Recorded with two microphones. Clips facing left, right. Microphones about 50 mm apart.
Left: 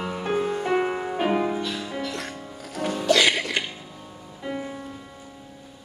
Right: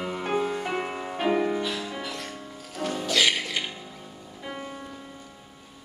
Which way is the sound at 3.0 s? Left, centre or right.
Left.